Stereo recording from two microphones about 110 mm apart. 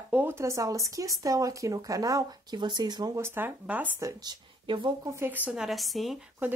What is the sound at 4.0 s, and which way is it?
Speech, 30° right (ahead or behind).